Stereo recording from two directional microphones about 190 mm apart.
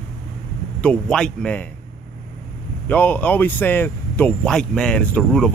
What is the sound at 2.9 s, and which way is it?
Speech, 10° left (ahead or behind).